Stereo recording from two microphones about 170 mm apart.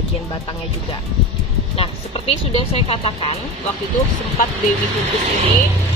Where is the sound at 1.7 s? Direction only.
35° left (ahead or behind).